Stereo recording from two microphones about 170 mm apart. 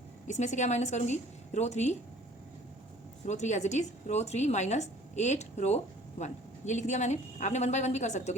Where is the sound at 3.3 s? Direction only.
45° left (ahead or behind).